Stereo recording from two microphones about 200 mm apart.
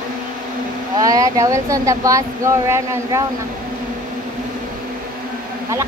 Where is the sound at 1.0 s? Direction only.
15° right (ahead or behind).